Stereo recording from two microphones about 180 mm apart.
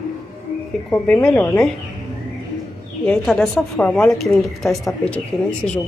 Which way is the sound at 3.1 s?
5° left (ahead or behind).